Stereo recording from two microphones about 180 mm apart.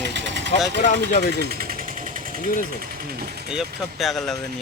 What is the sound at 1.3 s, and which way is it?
Vehicle, 55° right (ahead or behind).